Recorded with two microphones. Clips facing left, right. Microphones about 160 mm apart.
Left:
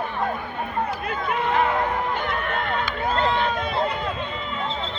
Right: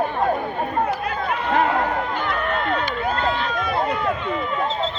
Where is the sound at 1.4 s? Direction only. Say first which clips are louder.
Right 2 dB; 50° right (ahead or behind).